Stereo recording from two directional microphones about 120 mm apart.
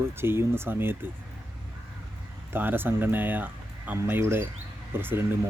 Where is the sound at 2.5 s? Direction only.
15° right (ahead or behind).